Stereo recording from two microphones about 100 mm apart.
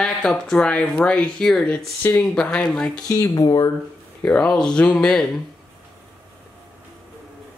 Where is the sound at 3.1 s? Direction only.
35° left (ahead or behind).